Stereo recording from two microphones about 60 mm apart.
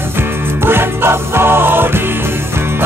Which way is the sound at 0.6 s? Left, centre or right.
Right.